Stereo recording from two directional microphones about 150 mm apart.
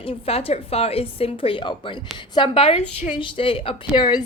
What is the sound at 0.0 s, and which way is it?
A woman's voice, 40° left (ahead or behind).